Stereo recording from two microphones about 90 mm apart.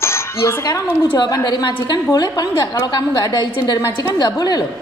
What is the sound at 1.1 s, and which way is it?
A woman's voice, 50° left (ahead or behind).